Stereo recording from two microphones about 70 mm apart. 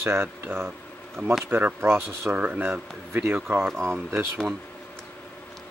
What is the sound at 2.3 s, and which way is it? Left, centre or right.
Speech, right.